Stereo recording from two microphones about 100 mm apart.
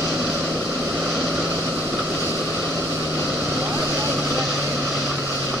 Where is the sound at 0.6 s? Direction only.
30° right (ahead or behind).